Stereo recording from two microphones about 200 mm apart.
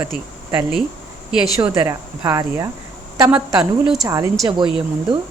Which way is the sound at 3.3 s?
25° right (ahead or behind).